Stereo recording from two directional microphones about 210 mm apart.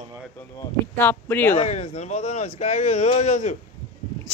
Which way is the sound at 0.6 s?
10° left (ahead or behind).